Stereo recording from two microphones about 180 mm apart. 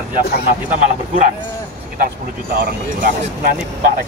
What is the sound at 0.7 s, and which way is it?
Speech, 45° right (ahead or behind).